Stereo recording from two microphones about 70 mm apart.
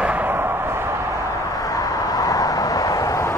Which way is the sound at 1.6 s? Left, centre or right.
Left.